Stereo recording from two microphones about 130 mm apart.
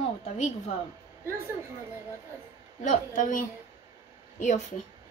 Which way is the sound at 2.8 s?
75° left (ahead or behind).